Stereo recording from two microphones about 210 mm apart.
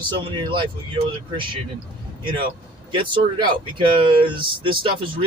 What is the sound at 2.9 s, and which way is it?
Speech, 25° right (ahead or behind).